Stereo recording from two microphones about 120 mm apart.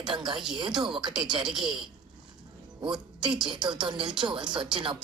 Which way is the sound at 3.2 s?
40° right (ahead or behind).